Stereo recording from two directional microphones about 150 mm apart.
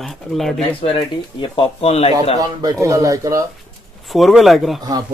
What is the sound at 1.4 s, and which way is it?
Speech, 35° left (ahead or behind).